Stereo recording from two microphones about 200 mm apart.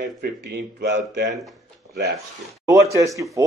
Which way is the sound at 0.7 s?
60° right (ahead or behind).